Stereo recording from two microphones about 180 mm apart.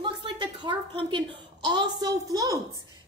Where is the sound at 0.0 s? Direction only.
25° right (ahead or behind).